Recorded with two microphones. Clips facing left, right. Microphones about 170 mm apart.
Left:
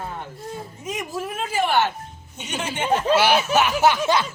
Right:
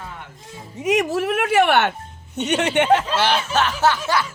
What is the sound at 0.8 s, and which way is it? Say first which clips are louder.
A woman's voice: right 11 dB; 80° right.